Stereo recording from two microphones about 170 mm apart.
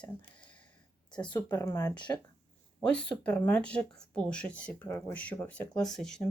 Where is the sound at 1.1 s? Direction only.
5° left (ahead or behind); by 2.2 s 25° left (ahead or behind).